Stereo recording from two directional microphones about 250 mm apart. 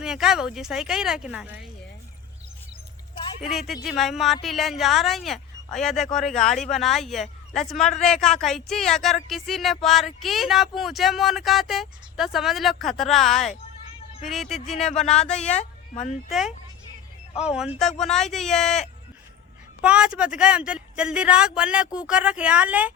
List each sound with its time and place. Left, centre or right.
0.0 s speech: centre
3.2 s a sound: centre
3.5 s speech: centre
15.4 s speech: left
17.4 s speech: centre